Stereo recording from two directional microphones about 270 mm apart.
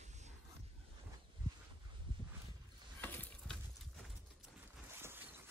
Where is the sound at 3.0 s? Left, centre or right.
Centre.